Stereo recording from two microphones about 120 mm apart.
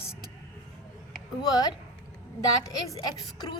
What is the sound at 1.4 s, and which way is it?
Speech, 30° left (ahead or behind).